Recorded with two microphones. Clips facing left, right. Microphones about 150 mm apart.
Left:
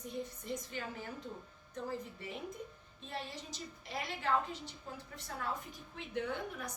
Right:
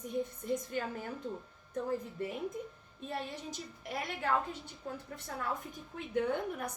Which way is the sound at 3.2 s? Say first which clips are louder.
Right 2 dB; 55° right (ahead or behind).